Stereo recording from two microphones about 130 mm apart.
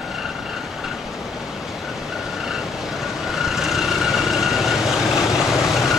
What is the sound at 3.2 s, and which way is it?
Vehicle, centre (ahead or behind).